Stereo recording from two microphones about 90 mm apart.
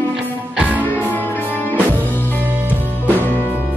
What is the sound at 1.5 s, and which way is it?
Music, 20° left (ahead or behind).